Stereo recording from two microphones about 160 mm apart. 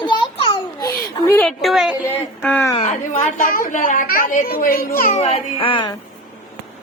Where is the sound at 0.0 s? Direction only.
30° left (ahead or behind).